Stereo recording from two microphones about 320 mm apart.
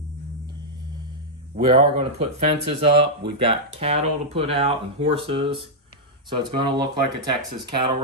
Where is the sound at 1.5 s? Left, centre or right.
Right.